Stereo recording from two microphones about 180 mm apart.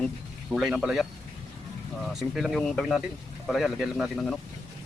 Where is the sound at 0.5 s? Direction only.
Centre (ahead or behind).